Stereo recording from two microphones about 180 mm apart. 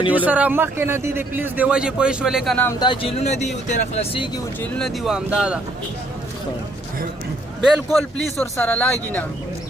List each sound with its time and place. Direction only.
0.1 s a man's voice: 10° right (ahead or behind)
2.6 s speech: 20° left (ahead or behind)
4.6 s speech: 5° left (ahead or behind)
7.7 s speech: centre (ahead or behind)